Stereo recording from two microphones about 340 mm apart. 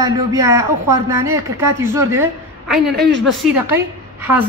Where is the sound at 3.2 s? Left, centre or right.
Centre.